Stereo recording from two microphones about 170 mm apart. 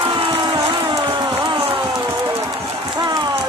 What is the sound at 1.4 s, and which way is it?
Run, 30° right (ahead or behind).